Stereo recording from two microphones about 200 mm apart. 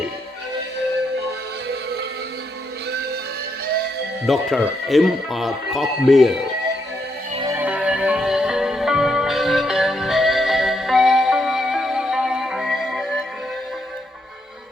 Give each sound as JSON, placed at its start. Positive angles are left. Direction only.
{"t": 1.6, "sound": "music", "side_deg": -55}
{"t": 4.3, "sound": "speech", "side_deg": 0}
{"t": 7.5, "sound": "music", "side_deg": -5}